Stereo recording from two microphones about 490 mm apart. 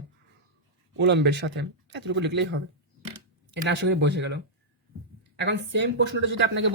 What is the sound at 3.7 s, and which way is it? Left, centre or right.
Speech, right.